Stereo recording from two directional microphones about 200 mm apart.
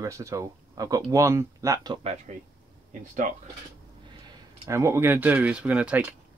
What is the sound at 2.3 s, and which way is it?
Speech, 35° right (ahead or behind).